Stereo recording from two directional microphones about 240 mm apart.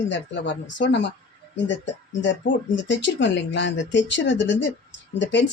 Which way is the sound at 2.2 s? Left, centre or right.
Left.